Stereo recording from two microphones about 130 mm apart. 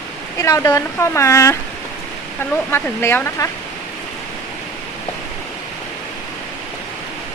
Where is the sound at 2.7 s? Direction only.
20° left (ahead or behind).